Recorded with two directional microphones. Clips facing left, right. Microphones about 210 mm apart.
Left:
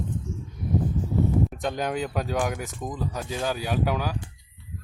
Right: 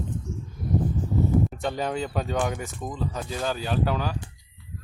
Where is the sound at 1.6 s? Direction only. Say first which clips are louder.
Even; centre (ahead or behind).